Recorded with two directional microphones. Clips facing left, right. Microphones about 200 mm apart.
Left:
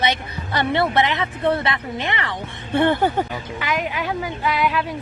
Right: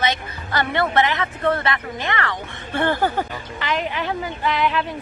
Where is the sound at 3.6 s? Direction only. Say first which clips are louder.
Right 1 dB; 10° left (ahead or behind).